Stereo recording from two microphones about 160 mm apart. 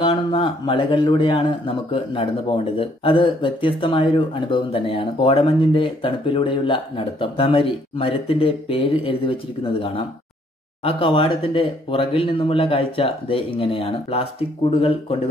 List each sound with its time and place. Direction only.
0.0 s speech: 30° left (ahead or behind)